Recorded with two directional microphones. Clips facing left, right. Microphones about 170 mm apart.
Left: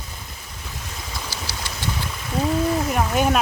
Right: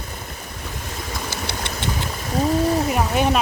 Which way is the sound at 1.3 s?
60° right (ahead or behind).